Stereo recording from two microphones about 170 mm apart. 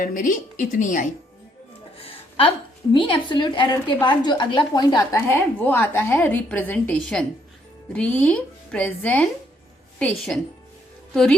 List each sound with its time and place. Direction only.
0.0 s a woman's voice: 50° left (ahead or behind)
2.0 s a sound: 35° left (ahead or behind)
2.9 s a woman's voice: 25° left (ahead or behind); by 11.3 s centre (ahead or behind)